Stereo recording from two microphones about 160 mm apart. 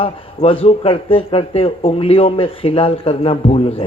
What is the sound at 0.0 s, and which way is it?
Speech, 35° left (ahead or behind).